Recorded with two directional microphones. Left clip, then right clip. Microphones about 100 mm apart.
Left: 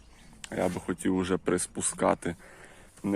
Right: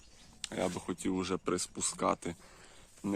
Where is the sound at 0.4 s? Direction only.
35° right (ahead or behind).